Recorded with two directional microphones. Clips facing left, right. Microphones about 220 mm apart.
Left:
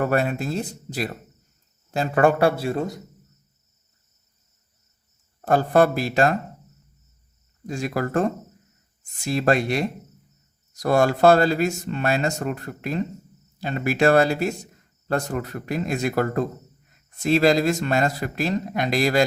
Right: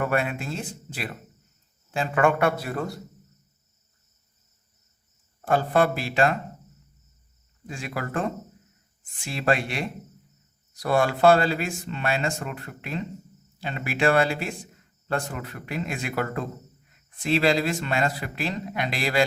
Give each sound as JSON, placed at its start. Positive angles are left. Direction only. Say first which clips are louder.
{"t": 0.0, "sound": "a man's voice", "louder": "left 4 dB", "side_deg": 40}
{"t": 5.5, "sound": "a man's voice", "louder": "left 4 dB", "side_deg": 40}
{"t": 7.7, "sound": "a man's voice", "louder": "left 7 dB", "side_deg": 40}